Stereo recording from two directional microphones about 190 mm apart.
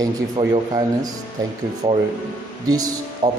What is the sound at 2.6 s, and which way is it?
Speech, 20° right (ahead or behind).